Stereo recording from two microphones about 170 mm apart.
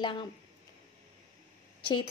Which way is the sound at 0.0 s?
30° left (ahead or behind).